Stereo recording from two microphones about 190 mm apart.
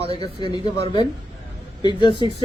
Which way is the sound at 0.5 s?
20° left (ahead or behind).